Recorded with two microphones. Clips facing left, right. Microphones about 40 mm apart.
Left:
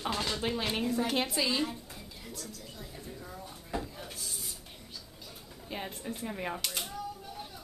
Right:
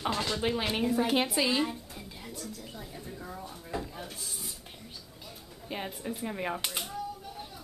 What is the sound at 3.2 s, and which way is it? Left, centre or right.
Drawer open or close, centre.